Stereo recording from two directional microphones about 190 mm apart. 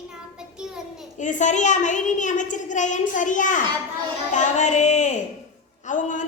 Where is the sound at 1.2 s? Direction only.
40° left (ahead or behind).